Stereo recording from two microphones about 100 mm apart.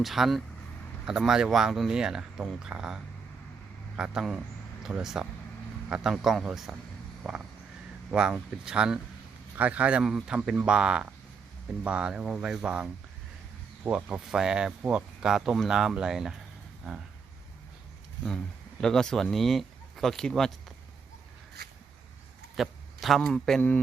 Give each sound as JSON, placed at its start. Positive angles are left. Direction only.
{"t": 0.0, "sound": "speech", "side_deg": 0}
{"t": 7.2, "sound": "crow", "side_deg": 0}
{"t": 8.1, "sound": "speech", "side_deg": -10}
{"t": 18.8, "sound": "speech", "side_deg": 5}
{"t": 22.5, "sound": "a man's voice", "side_deg": 0}
{"t": 23.6, "sound": "a sound", "side_deg": 15}